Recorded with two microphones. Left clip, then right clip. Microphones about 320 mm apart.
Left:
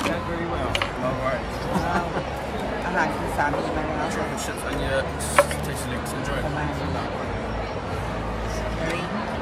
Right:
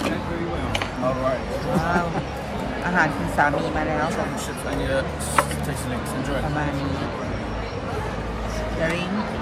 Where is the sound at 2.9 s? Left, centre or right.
Right.